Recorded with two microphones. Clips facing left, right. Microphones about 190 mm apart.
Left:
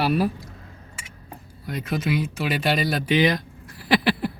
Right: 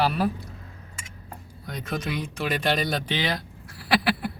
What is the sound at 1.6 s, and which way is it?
Speech, 5° left (ahead or behind).